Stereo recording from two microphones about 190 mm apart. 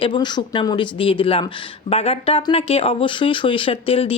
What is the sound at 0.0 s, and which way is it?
Speech, 25° left (ahead or behind).